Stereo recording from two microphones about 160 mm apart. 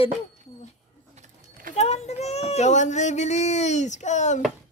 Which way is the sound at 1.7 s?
45° left (ahead or behind).